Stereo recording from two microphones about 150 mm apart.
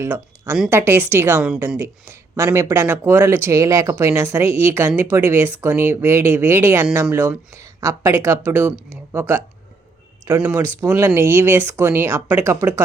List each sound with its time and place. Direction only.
0.0 s speech: 15° right (ahead or behind)